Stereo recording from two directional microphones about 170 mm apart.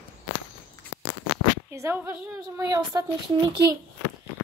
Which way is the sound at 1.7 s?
15° right (ahead or behind).